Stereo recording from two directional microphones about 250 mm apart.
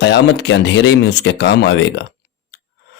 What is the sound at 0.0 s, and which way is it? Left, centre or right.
Speech, left.